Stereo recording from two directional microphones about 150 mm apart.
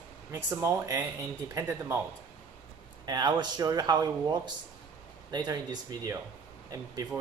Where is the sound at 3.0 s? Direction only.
25° right (ahead or behind).